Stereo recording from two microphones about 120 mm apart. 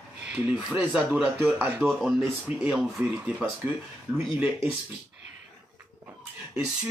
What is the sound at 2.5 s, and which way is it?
Speech, 65° left (ahead or behind).